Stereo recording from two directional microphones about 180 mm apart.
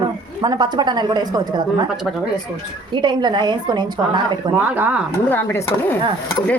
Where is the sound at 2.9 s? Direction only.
25° right (ahead or behind).